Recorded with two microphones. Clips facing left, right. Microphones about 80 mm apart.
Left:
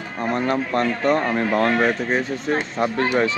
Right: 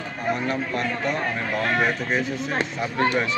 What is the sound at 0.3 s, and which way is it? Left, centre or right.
Speech, left.